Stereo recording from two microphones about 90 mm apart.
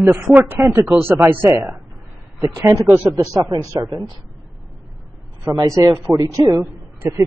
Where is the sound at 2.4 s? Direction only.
35° right (ahead or behind).